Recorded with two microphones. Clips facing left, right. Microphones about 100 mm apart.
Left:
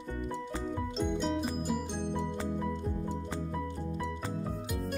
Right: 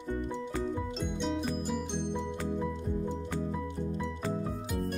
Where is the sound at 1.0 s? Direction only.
5° left (ahead or behind).